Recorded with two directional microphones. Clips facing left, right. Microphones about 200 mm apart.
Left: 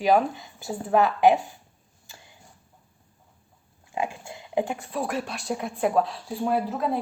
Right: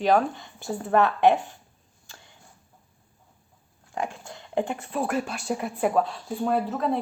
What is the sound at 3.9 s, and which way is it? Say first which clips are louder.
A woman's voice: left 2 dB; 10° left (ahead or behind).